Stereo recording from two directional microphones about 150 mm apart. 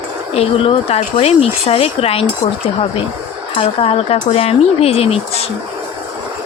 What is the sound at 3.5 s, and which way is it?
Speech, 40° left (ahead or behind).